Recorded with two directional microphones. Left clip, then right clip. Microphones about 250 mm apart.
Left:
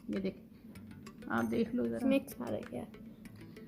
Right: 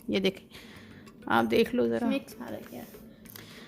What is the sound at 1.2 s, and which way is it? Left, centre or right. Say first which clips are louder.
Speech: right 10 dB; right.